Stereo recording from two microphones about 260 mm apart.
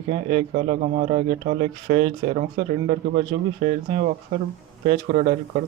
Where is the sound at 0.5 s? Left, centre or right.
Right.